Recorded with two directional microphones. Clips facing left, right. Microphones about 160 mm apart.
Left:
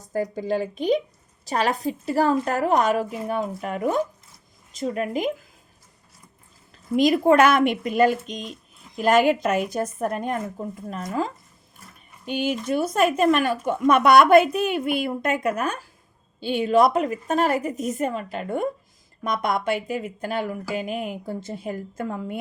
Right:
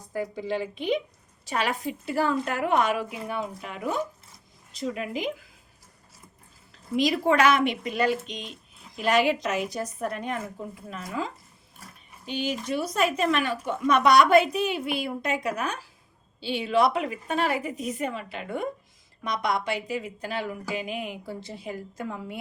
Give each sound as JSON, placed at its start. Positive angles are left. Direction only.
{"t": 0.0, "sound": "a woman's voice", "side_deg": 40}
{"t": 6.9, "sound": "speech", "side_deg": 50}